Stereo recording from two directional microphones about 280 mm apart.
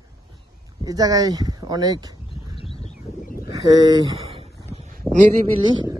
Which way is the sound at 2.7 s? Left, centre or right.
Left.